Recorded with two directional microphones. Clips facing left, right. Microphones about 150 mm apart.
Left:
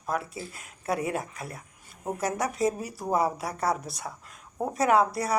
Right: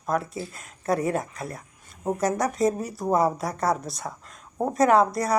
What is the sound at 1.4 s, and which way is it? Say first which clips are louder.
Speech: right 4 dB; 40° right (ahead or behind).